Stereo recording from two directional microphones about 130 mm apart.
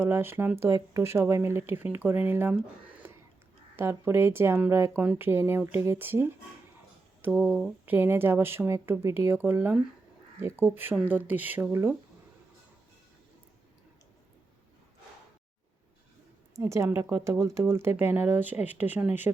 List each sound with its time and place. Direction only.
0.0 s speech: 15° right (ahead or behind)
16.6 s speech: 25° right (ahead or behind)